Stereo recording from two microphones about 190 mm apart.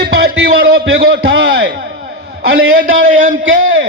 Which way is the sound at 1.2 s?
75° right (ahead or behind).